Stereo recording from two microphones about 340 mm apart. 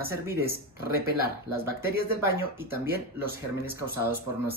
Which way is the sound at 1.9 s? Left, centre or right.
Left.